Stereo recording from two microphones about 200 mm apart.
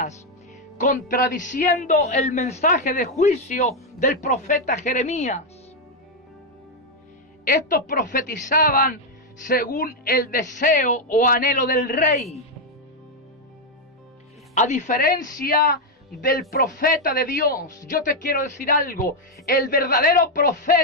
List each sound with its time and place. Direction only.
0.8 s a man's voice: 40° left (ahead or behind)
7.4 s speech: 45° left (ahead or behind)
14.5 s speech: 35° left (ahead or behind)
16.8 s speech: 45° left (ahead or behind)